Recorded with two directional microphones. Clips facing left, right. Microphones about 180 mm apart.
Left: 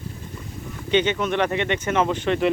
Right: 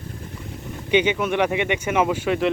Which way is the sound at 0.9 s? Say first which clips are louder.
Right 1 dB; 10° right (ahead or behind).